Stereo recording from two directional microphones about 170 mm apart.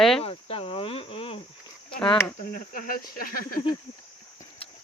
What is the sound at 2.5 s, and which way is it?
Speech, 55° left (ahead or behind).